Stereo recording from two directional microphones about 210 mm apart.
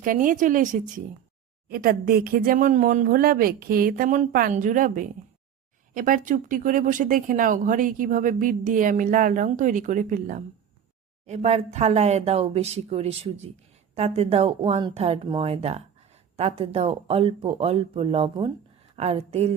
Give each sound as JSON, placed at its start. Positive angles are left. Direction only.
{"t": 0.0, "sound": "speech", "side_deg": -40}